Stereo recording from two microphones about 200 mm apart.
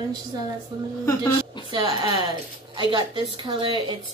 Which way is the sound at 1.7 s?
20° right (ahead or behind).